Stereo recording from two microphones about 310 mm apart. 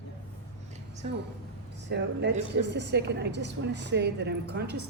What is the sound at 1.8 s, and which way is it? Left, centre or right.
A woman's voice, right.